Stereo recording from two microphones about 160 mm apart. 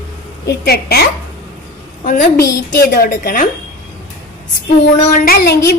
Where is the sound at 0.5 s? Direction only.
85° left.